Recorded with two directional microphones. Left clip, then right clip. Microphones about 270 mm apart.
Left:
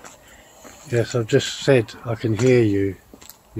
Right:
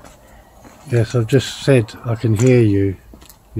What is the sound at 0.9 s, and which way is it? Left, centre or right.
Speech, centre.